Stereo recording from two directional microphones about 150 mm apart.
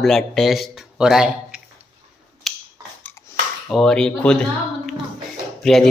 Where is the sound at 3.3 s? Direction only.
20° left (ahead or behind).